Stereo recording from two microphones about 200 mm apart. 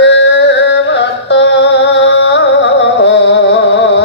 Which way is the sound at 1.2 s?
60° left (ahead or behind).